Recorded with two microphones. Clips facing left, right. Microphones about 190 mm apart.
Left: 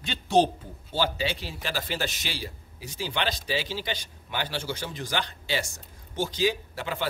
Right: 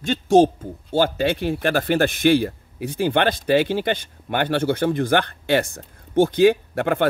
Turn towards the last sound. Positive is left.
turn(degrees=-55)  # may be behind; listen again after turning